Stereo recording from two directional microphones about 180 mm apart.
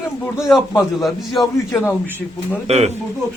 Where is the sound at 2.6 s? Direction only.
35° right (ahead or behind).